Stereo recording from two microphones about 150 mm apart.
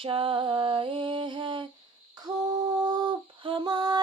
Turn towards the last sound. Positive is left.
turn(degrees=-30)  # may be behind; listen again after turning